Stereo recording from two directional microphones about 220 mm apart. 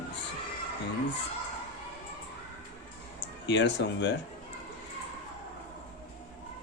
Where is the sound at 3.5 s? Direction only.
55° left (ahead or behind).